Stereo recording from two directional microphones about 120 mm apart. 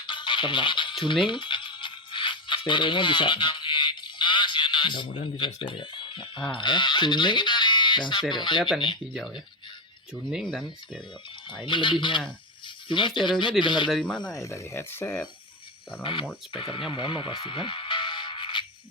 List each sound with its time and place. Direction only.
0.0 s music: 40° left (ahead or behind)
5.5 s speech: 40° left (ahead or behind)
10.2 s speech: centre (ahead or behind)
11.6 s speech: 40° left (ahead or behind)
13.9 s speech: 5° left (ahead or behind)
14.4 s speech: 25° left (ahead or behind)
16.5 s speech: 45° left (ahead or behind)
16.9 s music: 45° left (ahead or behind)